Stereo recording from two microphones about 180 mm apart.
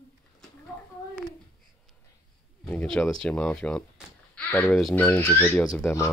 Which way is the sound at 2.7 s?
5° left (ahead or behind).